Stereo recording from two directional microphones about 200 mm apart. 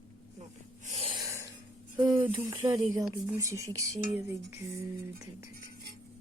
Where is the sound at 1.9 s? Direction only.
20° right (ahead or behind).